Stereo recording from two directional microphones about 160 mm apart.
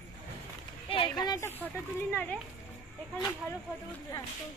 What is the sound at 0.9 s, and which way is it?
Speech, 30° left (ahead or behind).